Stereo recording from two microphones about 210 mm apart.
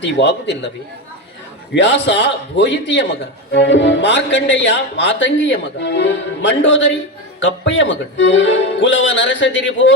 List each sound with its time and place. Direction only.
0.2 s a man's voice: 60° left (ahead or behind)
1.7 s a man's voice: 55° left (ahead or behind)